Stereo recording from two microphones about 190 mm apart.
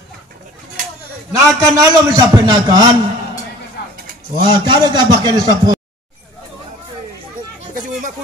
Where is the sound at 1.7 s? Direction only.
20° right (ahead or behind).